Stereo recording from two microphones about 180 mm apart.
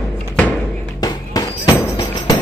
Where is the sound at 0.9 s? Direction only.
20° left (ahead or behind).